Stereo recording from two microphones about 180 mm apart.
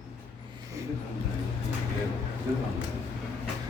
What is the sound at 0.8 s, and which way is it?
Vehicle, 15° right (ahead or behind).